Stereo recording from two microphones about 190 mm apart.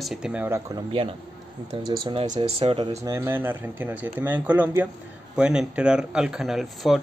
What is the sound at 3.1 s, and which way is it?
Speech, 10° right (ahead or behind).